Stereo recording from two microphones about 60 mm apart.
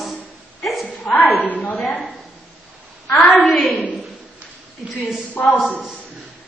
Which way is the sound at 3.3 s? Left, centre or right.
Centre.